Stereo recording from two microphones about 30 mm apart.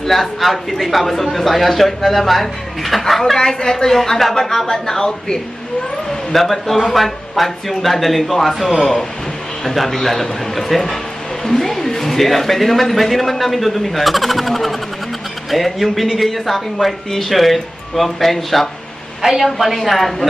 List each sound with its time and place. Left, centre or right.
0.0 s speech: centre
3.3 s speech: centre
6.0 s speech: centre